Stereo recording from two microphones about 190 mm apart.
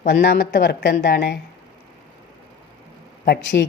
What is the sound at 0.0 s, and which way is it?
A woman's voice, 50° left (ahead or behind).